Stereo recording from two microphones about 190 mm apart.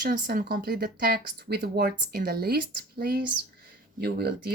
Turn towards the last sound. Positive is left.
turn(degrees=-55)  # may be behind; listen again after turning